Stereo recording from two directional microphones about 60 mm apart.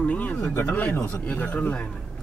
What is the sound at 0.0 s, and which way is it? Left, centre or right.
Speech, left.